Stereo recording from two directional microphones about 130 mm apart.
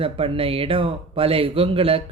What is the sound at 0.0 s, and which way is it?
Speech, 45° right (ahead or behind).